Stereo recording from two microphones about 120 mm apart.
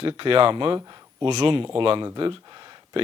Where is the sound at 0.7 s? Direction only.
35° right (ahead or behind).